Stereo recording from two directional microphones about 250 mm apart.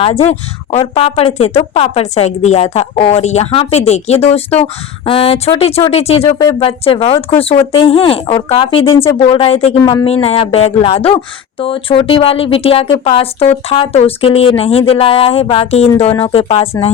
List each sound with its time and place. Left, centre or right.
0.0 s a woman's voice: left